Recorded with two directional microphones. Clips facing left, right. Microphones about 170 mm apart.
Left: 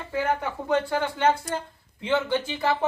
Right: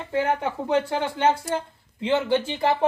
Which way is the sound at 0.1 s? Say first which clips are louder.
Right 3 dB; 25° right (ahead or behind).